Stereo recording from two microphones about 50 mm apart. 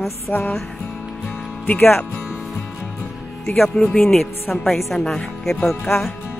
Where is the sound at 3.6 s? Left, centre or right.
Centre.